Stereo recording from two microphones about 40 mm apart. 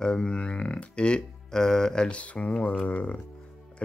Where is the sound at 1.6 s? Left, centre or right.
Centre.